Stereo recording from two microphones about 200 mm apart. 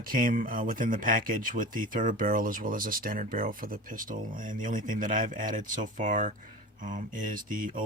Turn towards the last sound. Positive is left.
turn(degrees=-40)  # may be behind; listen again after turning